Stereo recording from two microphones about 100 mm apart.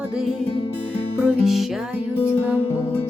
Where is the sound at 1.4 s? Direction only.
Centre (ahead or behind).